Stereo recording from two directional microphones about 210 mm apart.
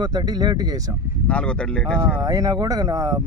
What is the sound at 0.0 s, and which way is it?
Speech, 20° right (ahead or behind).